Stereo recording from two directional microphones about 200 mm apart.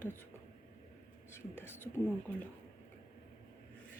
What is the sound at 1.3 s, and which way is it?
Speech, 10° left (ahead or behind).